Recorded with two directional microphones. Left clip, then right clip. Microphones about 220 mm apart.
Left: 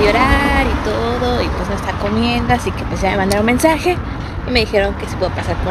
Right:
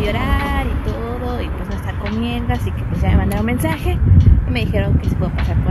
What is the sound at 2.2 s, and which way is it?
Speech, centre (ahead or behind).